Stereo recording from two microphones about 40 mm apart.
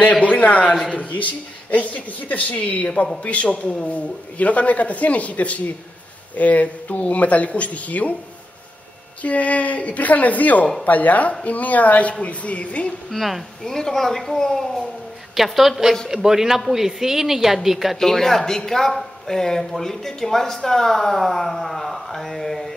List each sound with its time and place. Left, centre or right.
0.2 s a man's voice: left
9.2 s speech: left
13.1 s a woman's voice: centre
13.7 s speech: centre
15.3 s a woman's voice: centre
17.9 s speech: centre